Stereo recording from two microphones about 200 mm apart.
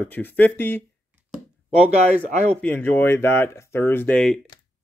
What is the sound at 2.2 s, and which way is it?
Speech, 35° right (ahead or behind).